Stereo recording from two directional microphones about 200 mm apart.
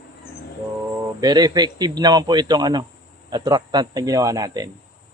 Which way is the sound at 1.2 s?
20° right (ahead or behind).